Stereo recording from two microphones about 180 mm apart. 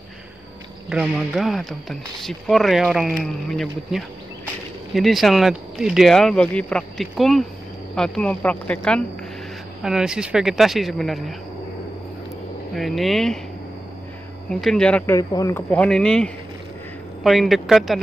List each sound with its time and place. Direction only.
0.8 s speech: centre (ahead or behind)
12.7 s speech: centre (ahead or behind)
14.5 s speech: 5° left (ahead or behind)
15.1 s speech: 20° left (ahead or behind)
15.7 s speech: 5° left (ahead or behind)